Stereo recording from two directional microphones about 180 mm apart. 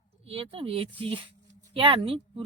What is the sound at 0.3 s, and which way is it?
Speech, 30° right (ahead or behind).